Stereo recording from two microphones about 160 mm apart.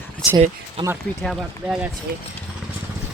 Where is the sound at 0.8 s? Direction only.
30° right (ahead or behind).